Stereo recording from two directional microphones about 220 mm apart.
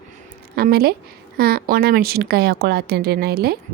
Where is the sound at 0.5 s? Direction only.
45° right (ahead or behind).